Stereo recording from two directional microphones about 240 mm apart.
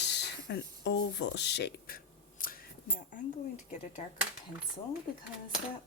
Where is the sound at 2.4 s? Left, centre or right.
Left.